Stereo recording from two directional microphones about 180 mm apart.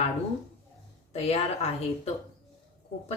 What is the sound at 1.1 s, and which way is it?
Speech, 35° left (ahead or behind).